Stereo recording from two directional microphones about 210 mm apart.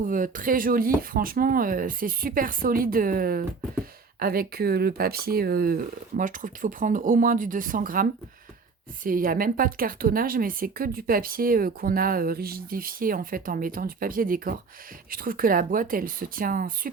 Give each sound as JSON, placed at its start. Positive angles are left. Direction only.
{"t": 0.0, "sound": "a woman's voice", "side_deg": -40}